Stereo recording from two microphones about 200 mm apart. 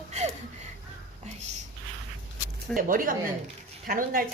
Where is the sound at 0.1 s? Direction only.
35° right (ahead or behind).